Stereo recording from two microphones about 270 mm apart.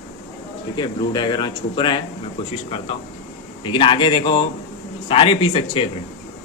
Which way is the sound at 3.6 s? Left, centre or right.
Centre.